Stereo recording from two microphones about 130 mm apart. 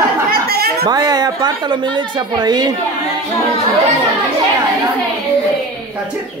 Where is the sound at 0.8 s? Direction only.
30° right (ahead or behind).